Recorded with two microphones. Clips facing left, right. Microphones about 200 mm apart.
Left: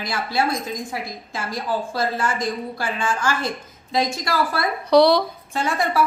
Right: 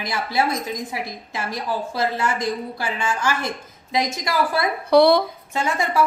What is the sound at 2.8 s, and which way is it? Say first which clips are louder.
A woman's voice: even; 20° right (ahead or behind).